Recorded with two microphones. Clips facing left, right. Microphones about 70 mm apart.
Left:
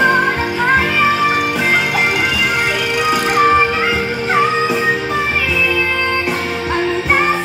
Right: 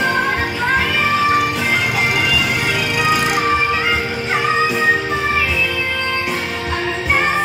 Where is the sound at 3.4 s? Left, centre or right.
Left.